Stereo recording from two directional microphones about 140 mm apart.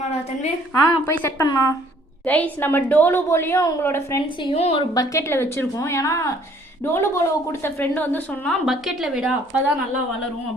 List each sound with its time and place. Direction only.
0.7 s a woman's voice: 15° left (ahead or behind)
1.5 s a woman's voice: 30° left (ahead or behind)
2.2 s a woman's voice: 10° left (ahead or behind)
4.4 s a woman's voice: 45° left (ahead or behind)
4.8 s a woman's voice: 25° left (ahead or behind)
8.6 s speech: centre (ahead or behind)